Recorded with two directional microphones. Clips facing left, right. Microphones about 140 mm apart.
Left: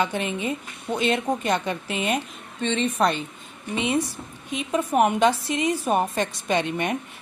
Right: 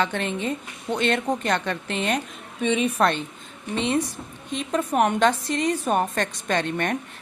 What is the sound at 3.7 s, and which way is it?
A woman's voice, 10° left (ahead or behind).